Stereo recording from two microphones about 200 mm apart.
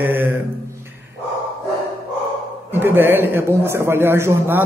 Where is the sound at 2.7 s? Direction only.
10° right (ahead or behind).